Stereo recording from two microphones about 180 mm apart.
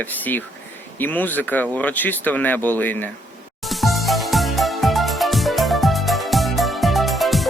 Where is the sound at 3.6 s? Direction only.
Centre (ahead or behind).